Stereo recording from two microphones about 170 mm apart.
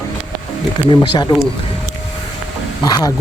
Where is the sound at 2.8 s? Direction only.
25° left (ahead or behind).